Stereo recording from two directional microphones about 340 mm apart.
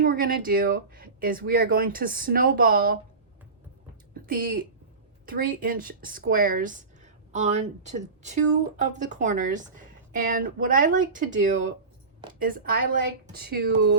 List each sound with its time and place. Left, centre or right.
0.0 s a woman's voice: right
4.1 s a woman's voice: right
12.3 s a woman's voice: right